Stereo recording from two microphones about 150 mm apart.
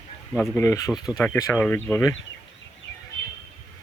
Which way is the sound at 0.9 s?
5° right (ahead or behind).